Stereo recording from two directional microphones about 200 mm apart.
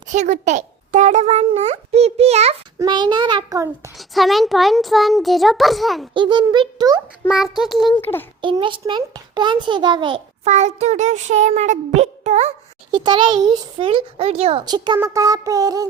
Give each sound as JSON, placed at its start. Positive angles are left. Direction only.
{"t": 0.1, "sound": "a sound", "side_deg": -35}
{"t": 2.7, "sound": "a child's voice", "side_deg": -20}
{"t": 3.9, "sound": "a child's voice", "side_deg": 0}
{"t": 6.1, "sound": "a child's voice", "side_deg": -25}
{"t": 7.3, "sound": "a child's voice", "side_deg": 0}
{"t": 8.4, "sound": "a child's voice", "side_deg": -25}
{"t": 12.9, "sound": "a child's voice", "side_deg": -25}